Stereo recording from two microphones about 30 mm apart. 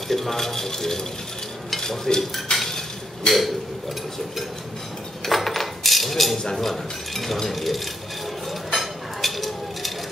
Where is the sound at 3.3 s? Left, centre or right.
Left.